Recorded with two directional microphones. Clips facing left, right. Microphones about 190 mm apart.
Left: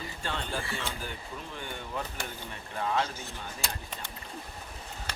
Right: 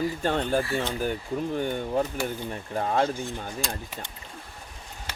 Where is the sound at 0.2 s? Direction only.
45° right (ahead or behind).